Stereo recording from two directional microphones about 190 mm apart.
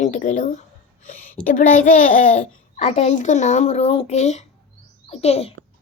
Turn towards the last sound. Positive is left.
turn(degrees=35)  # may be behind; listen again after turning